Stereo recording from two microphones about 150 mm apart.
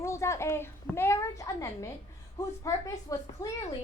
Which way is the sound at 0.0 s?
20° left (ahead or behind).